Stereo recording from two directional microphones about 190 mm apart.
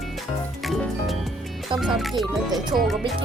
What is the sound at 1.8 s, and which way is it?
Speech, centre (ahead or behind).